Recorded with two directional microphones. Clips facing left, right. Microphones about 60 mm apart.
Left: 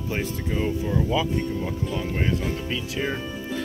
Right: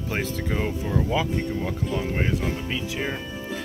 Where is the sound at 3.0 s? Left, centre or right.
Centre.